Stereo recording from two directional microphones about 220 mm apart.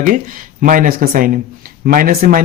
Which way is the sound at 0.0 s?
35° right (ahead or behind).